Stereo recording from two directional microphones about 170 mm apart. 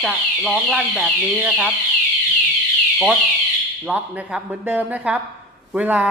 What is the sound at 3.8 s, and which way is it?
Speech, 5° right (ahead or behind).